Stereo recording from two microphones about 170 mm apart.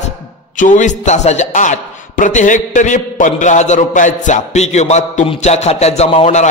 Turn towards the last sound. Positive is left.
turn(degrees=35)  # may be behind; listen again after turning